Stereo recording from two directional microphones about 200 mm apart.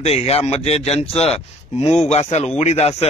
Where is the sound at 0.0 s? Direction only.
30° left (ahead or behind).